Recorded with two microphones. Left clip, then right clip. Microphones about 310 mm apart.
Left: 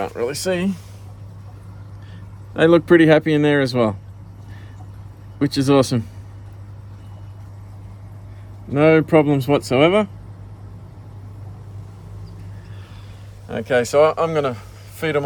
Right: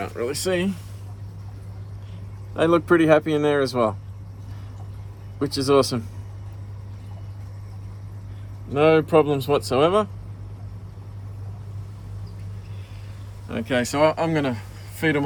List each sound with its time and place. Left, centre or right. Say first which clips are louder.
0.0 s speech: left 4 dB; centre
2.8 s speech: left 4 dB; left
5.4 s speech: left 3 dB; left
8.7 s speech: left 3 dB; left
13.5 s speech: left 6 dB; centre